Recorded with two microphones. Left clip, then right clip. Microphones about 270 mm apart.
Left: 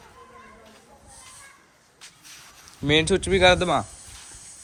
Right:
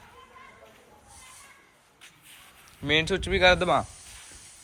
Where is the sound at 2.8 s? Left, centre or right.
Centre.